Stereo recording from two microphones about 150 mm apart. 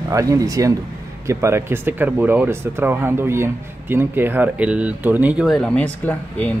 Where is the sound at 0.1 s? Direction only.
20° right (ahead or behind).